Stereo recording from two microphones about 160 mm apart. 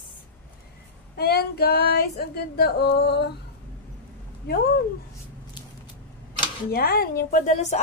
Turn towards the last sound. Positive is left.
turn(degrees=45)  # may be behind; listen again after turning